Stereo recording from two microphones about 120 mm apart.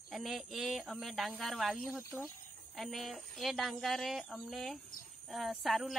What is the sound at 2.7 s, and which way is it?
A woman's voice, centre (ahead or behind).